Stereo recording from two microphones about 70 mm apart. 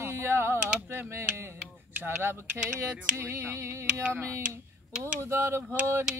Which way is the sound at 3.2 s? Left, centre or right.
Right.